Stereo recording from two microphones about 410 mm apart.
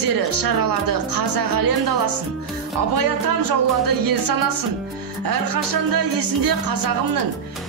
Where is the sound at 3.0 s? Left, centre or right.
Right.